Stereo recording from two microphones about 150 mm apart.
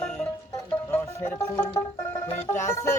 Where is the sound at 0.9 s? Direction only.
15° left (ahead or behind).